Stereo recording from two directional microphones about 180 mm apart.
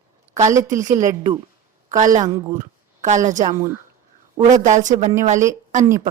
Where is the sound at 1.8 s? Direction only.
45° right (ahead or behind).